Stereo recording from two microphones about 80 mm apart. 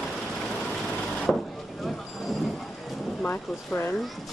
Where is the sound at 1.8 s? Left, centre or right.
Centre.